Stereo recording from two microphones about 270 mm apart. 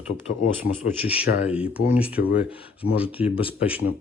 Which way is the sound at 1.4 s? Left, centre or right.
Centre.